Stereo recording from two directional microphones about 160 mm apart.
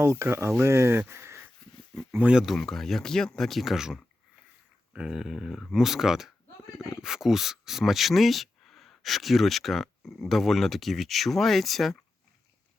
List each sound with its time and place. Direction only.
0.0 s speech: 15° right (ahead or behind); by 11.9 s centre (ahead or behind)